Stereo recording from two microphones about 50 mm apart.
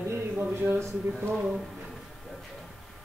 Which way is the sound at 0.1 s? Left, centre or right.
Right.